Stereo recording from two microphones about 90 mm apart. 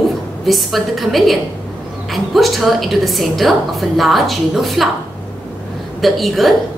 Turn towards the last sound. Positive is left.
turn(degrees=0)  # may be behind; listen again after turning